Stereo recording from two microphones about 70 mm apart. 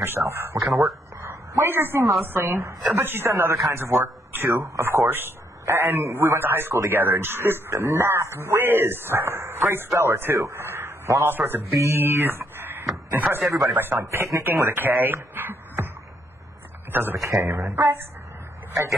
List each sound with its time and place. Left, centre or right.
0.0 s speech: right
0.7 s speech: centre
1.1 s a sound: right
2.2 s a man's voice: right
13.3 s a man's voice: right
13.7 s speech: right
14.5 s speech: right
15.3 s music: right
16.9 s speech: right